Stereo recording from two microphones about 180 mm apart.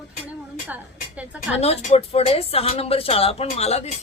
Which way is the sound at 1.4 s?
40° left (ahead or behind).